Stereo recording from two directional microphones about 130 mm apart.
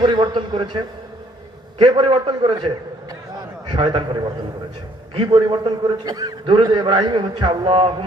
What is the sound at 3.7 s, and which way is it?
Speech, 40° right (ahead or behind).